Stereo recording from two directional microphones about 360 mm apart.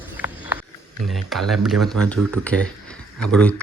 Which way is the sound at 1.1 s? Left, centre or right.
Centre.